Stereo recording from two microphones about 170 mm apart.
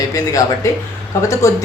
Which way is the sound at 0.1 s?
20° left (ahead or behind).